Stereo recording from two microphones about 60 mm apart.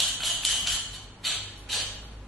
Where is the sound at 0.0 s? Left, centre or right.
Centre.